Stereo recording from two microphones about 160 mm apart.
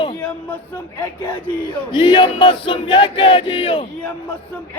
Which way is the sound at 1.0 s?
10° left (ahead or behind).